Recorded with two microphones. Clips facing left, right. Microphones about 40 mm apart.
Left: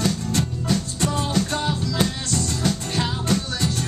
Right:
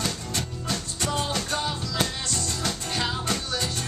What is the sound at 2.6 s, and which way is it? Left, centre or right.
Music, centre.